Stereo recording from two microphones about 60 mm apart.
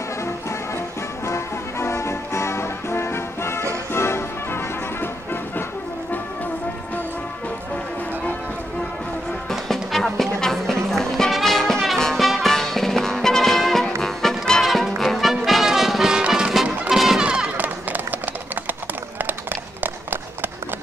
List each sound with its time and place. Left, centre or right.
0.2 s music: left
9.5 s music: centre
16.9 s music: centre
17.2 s music: centre
17.6 s run: right